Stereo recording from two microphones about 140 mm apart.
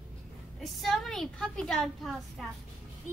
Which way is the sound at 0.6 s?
Centre (ahead or behind).